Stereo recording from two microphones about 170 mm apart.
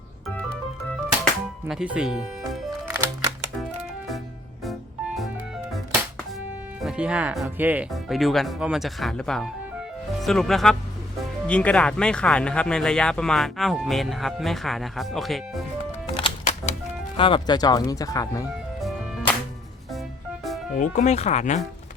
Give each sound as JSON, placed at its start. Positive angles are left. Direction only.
{"t": 1.2, "sound": "music", "side_deg": -5}
{"t": 2.6, "sound": "music", "side_deg": -15}
{"t": 4.6, "sound": "music", "side_deg": 0}
{"t": 6.8, "sound": "speech", "side_deg": -5}
{"t": 17.2, "sound": "speech", "side_deg": 30}
{"t": 18.8, "sound": "music", "side_deg": 0}
{"t": 20.7, "sound": "speech", "side_deg": 45}